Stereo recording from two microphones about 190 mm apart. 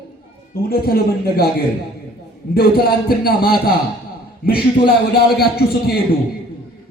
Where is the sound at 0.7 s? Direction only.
55° left (ahead or behind).